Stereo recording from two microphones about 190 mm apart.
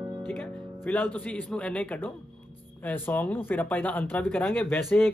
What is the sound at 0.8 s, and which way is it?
Music, 10° left (ahead or behind).